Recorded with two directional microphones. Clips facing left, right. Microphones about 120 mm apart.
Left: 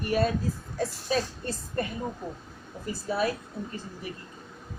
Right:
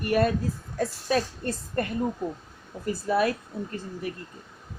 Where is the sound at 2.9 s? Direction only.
55° right (ahead or behind).